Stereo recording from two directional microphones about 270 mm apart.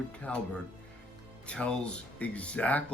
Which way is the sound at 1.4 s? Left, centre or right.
Centre.